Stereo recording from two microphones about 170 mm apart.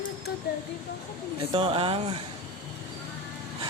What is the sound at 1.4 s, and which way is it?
Speech, 30° right (ahead or behind).